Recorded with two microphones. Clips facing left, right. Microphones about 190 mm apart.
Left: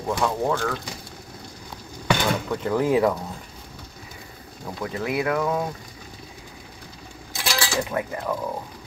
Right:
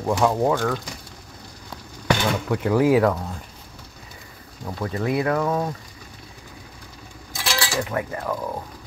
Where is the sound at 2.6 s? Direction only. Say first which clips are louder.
Right 3 dB; 10° right (ahead or behind).